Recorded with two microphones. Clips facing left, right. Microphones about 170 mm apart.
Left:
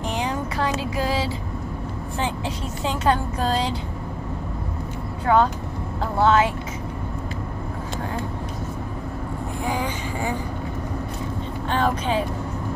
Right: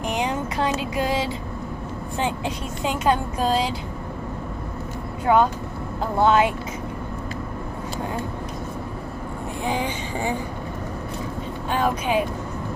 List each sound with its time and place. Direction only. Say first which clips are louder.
0.1 s music: right 2 dB; 20° right (ahead or behind)
2.1 s speech: right 2 dB; 15° right (ahead or behind)
5.2 s speech: right 1 dB; 15° right (ahead or behind)
9.7 s speech: right 1 dB; 25° right (ahead or behind)
11.7 s speech: right 1 dB; 10° right (ahead or behind)